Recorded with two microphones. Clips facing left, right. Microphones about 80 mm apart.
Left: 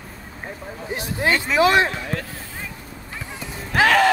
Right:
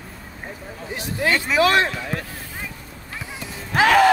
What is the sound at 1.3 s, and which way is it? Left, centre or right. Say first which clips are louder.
Speech: right 1 dB; centre.